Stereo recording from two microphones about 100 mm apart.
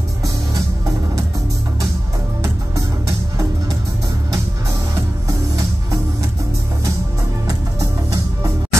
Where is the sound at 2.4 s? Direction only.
35° right (ahead or behind).